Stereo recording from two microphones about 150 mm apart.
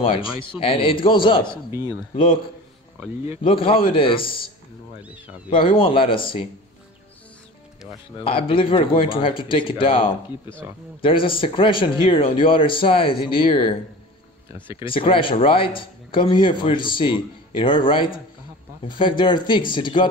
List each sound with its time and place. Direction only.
0.0 s a man's voice: 40° left (ahead or behind)
1.7 s speech: 15° right (ahead or behind)
2.1 s a man's voice: 35° left (ahead or behind)
5.5 s a man's voice: 35° left (ahead or behind)
8.2 s a man's voice: 35° left (ahead or behind)
14.9 s a man's voice: 35° left (ahead or behind)